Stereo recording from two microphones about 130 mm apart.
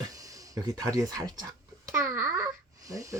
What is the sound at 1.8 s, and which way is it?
Babbling, 20° right (ahead or behind).